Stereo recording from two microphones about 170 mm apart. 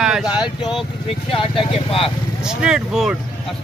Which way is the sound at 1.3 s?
30° left (ahead or behind).